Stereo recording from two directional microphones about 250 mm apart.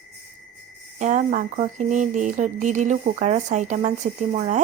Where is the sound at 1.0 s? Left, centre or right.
Right.